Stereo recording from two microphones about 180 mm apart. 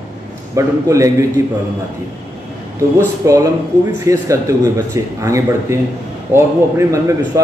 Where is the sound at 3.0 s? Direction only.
20° right (ahead or behind).